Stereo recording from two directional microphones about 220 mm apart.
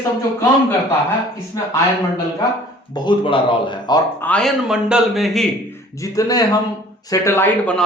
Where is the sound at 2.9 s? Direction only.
20° left (ahead or behind).